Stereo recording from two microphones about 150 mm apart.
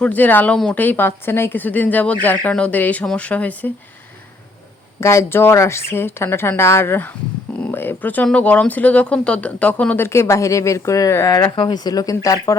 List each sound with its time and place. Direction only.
0.0 s speech: 10° left (ahead or behind)
4.9 s speech: 20° left (ahead or behind)